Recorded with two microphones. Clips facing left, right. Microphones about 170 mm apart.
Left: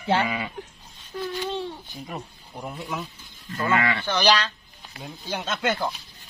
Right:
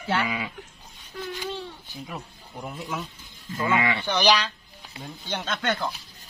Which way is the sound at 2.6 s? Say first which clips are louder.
Left 1 dB; centre (ahead or behind).